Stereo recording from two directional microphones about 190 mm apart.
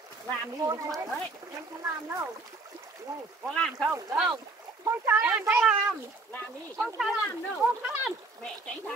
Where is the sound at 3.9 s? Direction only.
15° right (ahead or behind).